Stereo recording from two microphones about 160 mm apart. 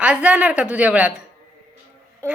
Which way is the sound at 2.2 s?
15° right (ahead or behind).